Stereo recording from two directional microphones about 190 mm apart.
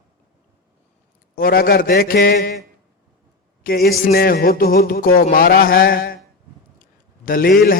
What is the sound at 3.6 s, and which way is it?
A man's voice, 50° left (ahead or behind).